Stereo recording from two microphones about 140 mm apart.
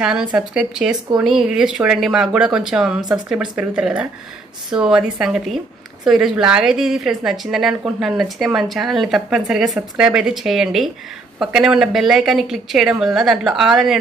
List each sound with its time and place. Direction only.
0.0 s speech: 5° right (ahead or behind)